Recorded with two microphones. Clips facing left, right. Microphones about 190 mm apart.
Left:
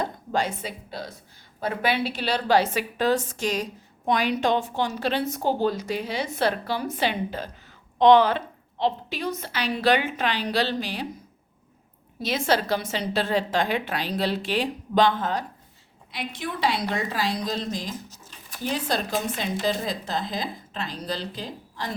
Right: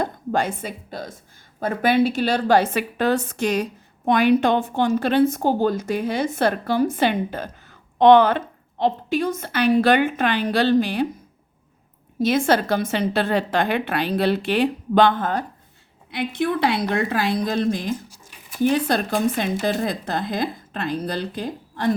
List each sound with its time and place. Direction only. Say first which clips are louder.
0.0 s a woman's voice: right 4 dB; 55° right (ahead or behind)
12.2 s a woman's voice: right 6 dB; 50° right (ahead or behind)
18.1 s a sound: right 1 dB; 10° right (ahead or behind)
18.6 s a woman's voice: right 8 dB; 55° right (ahead or behind)